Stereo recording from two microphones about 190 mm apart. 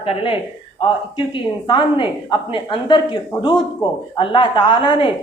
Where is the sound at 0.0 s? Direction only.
30° left (ahead or behind).